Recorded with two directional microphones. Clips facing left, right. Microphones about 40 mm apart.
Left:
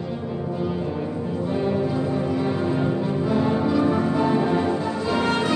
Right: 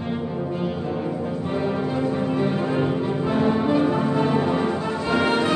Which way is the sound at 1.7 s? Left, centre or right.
Right.